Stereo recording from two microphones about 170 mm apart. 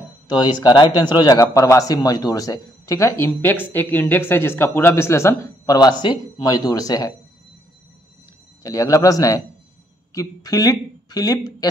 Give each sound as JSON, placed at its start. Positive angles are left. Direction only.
{"t": 0.3, "sound": "speech", "side_deg": 25}
{"t": 8.6, "sound": "speech", "side_deg": 20}